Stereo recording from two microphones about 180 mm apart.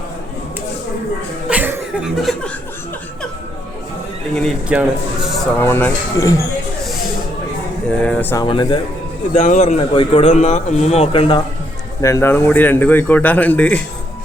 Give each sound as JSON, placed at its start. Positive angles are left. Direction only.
{"t": 1.5, "sound": "chuckle", "side_deg": -10}
{"t": 4.4, "sound": "speech", "side_deg": 0}
{"t": 5.5, "sound": "a man's voice", "side_deg": 10}
{"t": 7.9, "sound": "a man's voice", "side_deg": 5}
{"t": 8.4, "sound": "speech", "side_deg": 25}
{"t": 9.3, "sound": "speech", "side_deg": 40}
{"t": 12.0, "sound": "a man's voice", "side_deg": 15}